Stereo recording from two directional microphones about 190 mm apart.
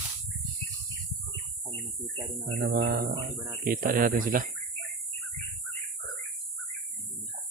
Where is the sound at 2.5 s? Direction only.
65° right (ahead or behind).